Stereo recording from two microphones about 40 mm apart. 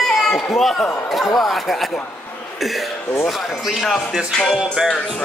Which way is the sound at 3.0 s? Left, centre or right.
Left.